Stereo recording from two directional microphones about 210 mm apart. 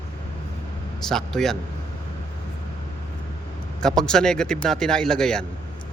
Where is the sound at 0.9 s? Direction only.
Centre (ahead or behind).